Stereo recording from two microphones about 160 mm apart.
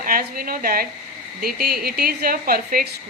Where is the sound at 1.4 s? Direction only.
75° right (ahead or behind).